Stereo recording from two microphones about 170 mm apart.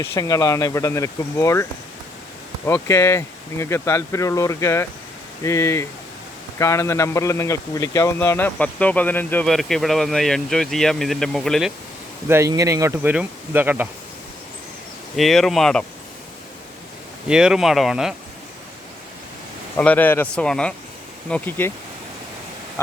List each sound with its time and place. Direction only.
0.0 s a man's voice: 15° left (ahead or behind)
2.6 s a man's voice: 15° left (ahead or behind)
12.3 s speech: 15° right (ahead or behind)
15.1 s speech: centre (ahead or behind)
17.2 s speech: 5° right (ahead or behind)
19.7 s a man's voice: 10° left (ahead or behind)